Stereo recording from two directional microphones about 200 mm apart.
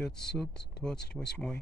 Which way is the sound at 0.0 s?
5° left (ahead or behind).